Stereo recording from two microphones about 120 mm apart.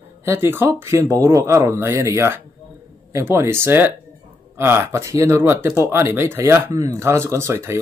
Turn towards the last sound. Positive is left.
turn(degrees=-20)  # may be behind; listen again after turning